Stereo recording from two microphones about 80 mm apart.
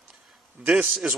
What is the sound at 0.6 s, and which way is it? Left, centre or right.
Speech, centre.